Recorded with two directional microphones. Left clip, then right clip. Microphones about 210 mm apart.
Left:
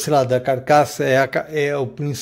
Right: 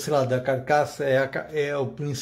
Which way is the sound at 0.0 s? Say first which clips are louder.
Left 6 dB; 45° left (ahead or behind).